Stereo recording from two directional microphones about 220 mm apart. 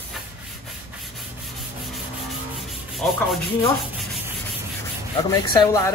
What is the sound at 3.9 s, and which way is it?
Sanding, centre (ahead or behind).